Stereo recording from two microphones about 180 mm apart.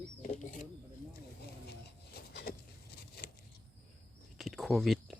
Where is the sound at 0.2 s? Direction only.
45° left (ahead or behind).